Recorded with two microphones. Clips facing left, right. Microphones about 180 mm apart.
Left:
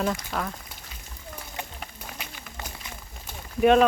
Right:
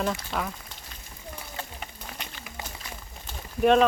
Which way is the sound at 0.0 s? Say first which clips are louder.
Left 1 dB; centre (ahead or behind).